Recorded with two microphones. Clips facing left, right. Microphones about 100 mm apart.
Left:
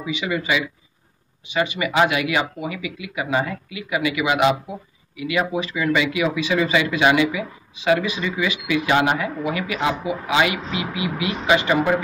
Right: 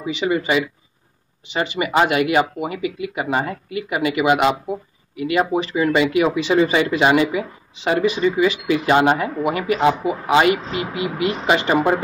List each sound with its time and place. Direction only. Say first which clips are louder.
0.2 s speech: right 4 dB; 35° right (ahead or behind)
1.6 s speech: right 1 dB; 40° right (ahead or behind)